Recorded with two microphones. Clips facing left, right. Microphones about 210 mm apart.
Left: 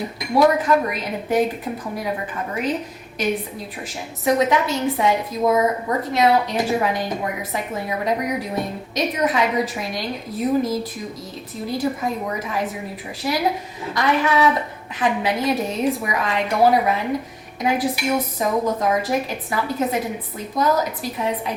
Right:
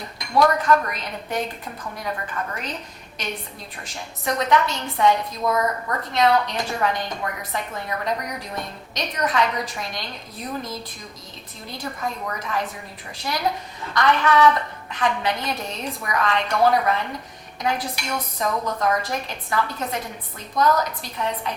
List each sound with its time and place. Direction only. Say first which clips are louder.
0.0 s a woman's voice: left 3 dB; 5° left (ahead or behind)
5.5 s a woman's voice: left 5 dB; 20° left (ahead or behind)
6.0 s a woman's voice: left 1 dB; 5° left (ahead or behind)